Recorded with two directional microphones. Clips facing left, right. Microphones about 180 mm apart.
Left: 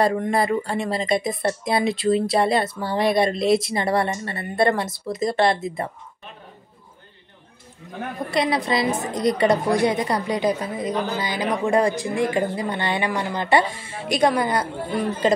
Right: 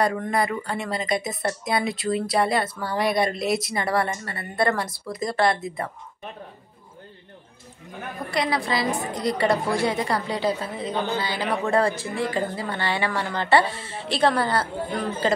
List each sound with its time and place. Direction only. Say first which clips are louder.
0.0 s speech: left 3 dB; 25° left (ahead or behind)
8.3 s speech: left 3 dB; 20° left (ahead or behind)